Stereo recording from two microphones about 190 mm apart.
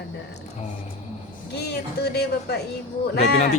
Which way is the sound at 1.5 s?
60° left (ahead or behind).